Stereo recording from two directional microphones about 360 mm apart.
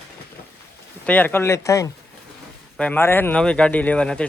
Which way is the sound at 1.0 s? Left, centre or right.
Centre.